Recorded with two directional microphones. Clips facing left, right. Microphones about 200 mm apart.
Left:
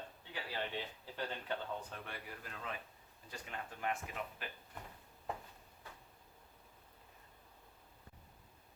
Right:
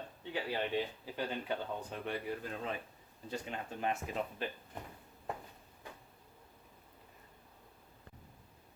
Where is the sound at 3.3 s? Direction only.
25° right (ahead or behind).